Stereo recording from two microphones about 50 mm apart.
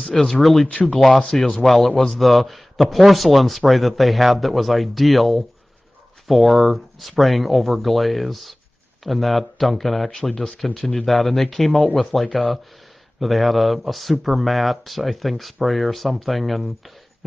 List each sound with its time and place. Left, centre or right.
0.0 s a man's voice: centre
0.7 s speech: left
0.9 s a man's voice: centre
10.3 s a man's voice: centre